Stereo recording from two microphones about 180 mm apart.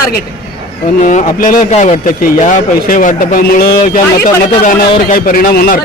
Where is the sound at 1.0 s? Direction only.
45° left (ahead or behind).